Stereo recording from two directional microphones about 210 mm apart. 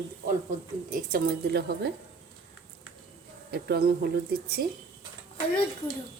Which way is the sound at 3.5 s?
50° right (ahead or behind).